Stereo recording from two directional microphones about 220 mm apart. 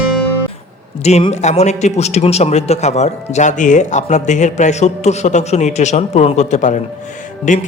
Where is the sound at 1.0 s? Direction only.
30° left (ahead or behind).